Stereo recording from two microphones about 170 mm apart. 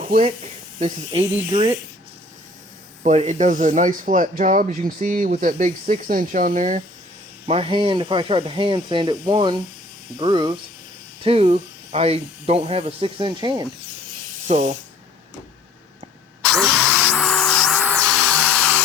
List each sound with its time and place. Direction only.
0.0 s speech: 40° right (ahead or behind)
3.0 s speech: 40° right (ahead or behind)
7.4 s speech: 35° right (ahead or behind)
14.4 s speech: 40° right (ahead or behind)
16.5 s music: centre (ahead or behind)